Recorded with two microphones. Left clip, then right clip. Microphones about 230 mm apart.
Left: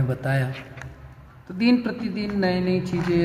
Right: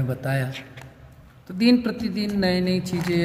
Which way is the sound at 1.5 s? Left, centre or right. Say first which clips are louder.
Right 2 dB; right.